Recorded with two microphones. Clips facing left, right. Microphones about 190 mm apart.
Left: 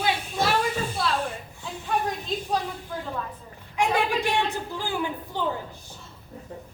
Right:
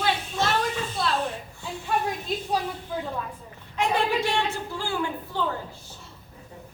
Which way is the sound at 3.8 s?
15° left (ahead or behind).